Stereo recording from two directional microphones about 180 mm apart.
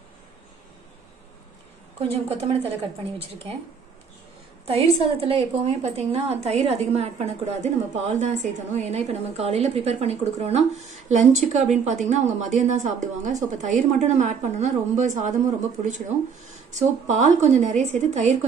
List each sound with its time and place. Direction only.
2.1 s a woman's voice: 35° right (ahead or behind)
4.6 s a woman's voice: 35° right (ahead or behind)